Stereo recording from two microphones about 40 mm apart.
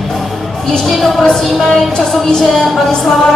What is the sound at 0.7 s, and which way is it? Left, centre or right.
Music, centre.